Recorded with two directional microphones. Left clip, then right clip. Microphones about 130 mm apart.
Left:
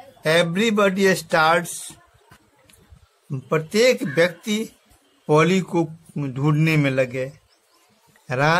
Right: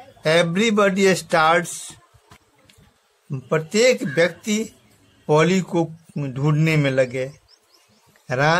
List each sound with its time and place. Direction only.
0.2 s speech: 15° right (ahead or behind)
3.3 s a man's voice: centre (ahead or behind)